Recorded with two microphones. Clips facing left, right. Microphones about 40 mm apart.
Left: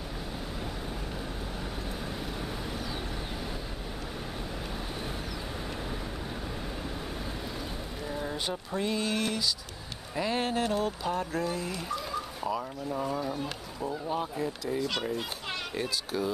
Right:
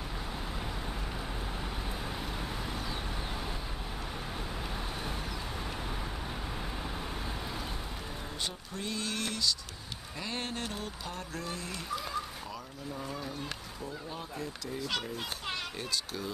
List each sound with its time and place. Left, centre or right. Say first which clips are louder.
8.5 s speech: left 7 dB; centre
12.4 s speech: left 9 dB; left
13.0 s speech: left 7 dB; centre
13.8 s speech: left 10 dB; left
14.8 s speech: left 3 dB; centre